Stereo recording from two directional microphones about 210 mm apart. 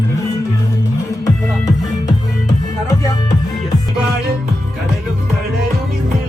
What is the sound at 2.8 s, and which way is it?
Music, 15° left (ahead or behind).